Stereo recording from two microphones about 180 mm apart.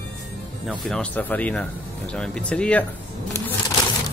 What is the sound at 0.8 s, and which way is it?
Speech, 5° left (ahead or behind).